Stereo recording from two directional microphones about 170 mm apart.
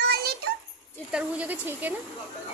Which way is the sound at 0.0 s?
65° right (ahead or behind).